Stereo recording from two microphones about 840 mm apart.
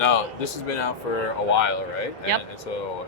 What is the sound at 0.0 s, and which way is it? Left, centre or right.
Speech, left.